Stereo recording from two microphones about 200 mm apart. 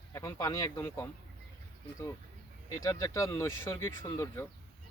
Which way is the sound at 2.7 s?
15° left (ahead or behind).